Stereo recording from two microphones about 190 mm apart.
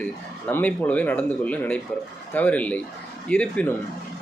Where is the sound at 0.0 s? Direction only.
10° left (ahead or behind).